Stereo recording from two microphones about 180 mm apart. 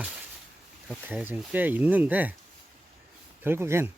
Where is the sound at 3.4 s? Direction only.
15° right (ahead or behind).